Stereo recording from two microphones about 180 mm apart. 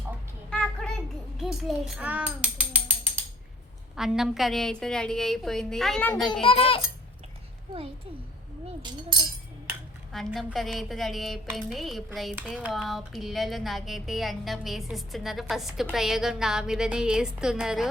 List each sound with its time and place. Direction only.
0.5 s a sound: 5° left (ahead or behind)
1.4 s speech: centre (ahead or behind)
3.9 s speech: centre (ahead or behind)
6.4 s a child's voice: 30° left (ahead or behind)
8.8 s speech: 25° right (ahead or behind)
10.1 s speech: centre (ahead or behind)